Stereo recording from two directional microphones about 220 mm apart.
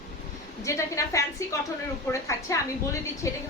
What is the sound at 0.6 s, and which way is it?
A woman's voice, 15° left (ahead or behind).